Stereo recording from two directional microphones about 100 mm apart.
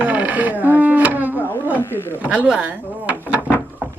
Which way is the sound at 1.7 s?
25° left (ahead or behind).